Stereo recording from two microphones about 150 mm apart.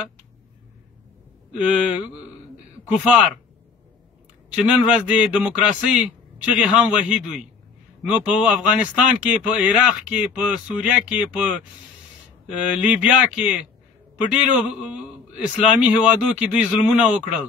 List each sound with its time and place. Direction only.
1.6 s speech: 10° right (ahead or behind)
4.6 s speech: 10° right (ahead or behind)